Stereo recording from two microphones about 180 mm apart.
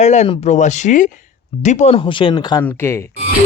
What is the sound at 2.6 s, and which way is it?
Speech, 15° left (ahead or behind).